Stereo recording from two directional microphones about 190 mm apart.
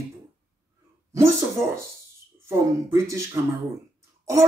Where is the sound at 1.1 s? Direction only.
15° right (ahead or behind).